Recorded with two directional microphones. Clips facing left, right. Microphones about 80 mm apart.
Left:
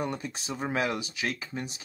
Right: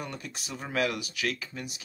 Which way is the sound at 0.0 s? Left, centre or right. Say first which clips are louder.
Left 6 dB; left.